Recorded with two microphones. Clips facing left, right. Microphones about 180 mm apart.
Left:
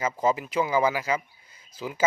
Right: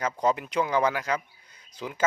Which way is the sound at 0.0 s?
5° left (ahead or behind).